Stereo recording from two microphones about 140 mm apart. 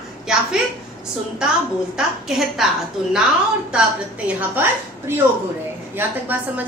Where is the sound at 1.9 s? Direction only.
Centre (ahead or behind).